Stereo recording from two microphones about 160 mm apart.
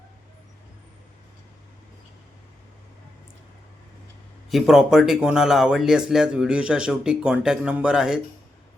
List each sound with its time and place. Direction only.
4.4 s speech: centre (ahead or behind)